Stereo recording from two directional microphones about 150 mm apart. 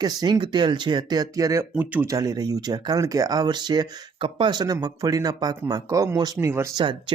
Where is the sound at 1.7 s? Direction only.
10° right (ahead or behind).